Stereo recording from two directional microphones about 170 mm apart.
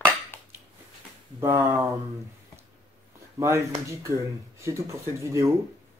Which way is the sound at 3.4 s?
20° right (ahead or behind).